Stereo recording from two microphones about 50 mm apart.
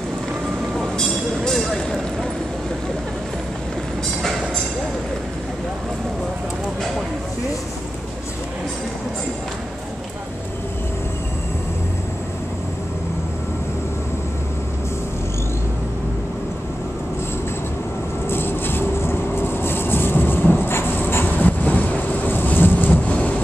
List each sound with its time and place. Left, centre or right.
0.7 s vehicle: centre
18.3 s vehicle: left